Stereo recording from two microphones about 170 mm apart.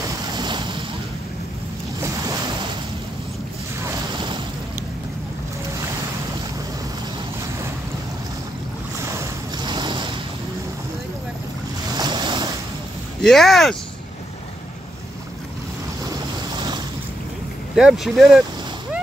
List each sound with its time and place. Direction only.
0.0 s waves: 25° right (ahead or behind)
9.1 s a sound: 20° right (ahead or behind)
12.0 s boat: 25° right (ahead or behind)
13.2 s speech: centre (ahead or behind)
16.5 s boat: 25° right (ahead or behind)
17.7 s speech: centre (ahead or behind)